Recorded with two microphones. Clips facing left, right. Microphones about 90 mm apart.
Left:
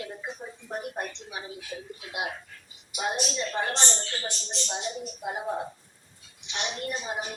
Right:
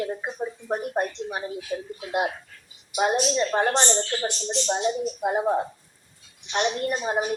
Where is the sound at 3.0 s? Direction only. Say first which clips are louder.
Right 8 dB; 55° right (ahead or behind).